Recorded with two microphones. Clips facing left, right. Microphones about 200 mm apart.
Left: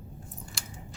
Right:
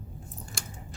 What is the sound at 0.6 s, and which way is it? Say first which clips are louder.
Chewing: right 3 dB; 50° right (ahead or behind).